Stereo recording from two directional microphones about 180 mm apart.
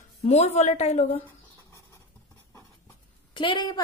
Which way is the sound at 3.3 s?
25° left (ahead or behind).